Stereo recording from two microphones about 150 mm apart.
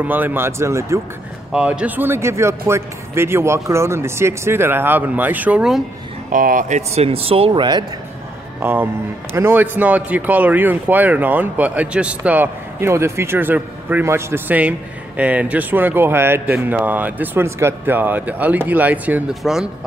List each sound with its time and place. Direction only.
0.0 s speech: 10° right (ahead or behind)
1.5 s speech: 5° right (ahead or behind)
6.3 s speech: 65° right (ahead or behind)
7.0 s speech: 40° right (ahead or behind)
8.5 s speech: 15° right (ahead or behind)